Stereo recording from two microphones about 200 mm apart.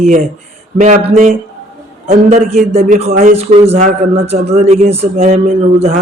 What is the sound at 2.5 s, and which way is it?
A man's voice, 35° right (ahead or behind).